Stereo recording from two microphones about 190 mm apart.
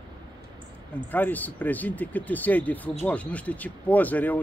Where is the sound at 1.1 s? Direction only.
10° left (ahead or behind).